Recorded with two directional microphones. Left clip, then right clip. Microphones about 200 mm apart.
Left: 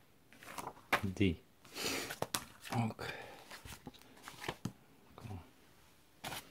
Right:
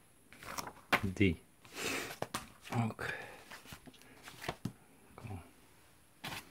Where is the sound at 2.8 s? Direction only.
Centre (ahead or behind).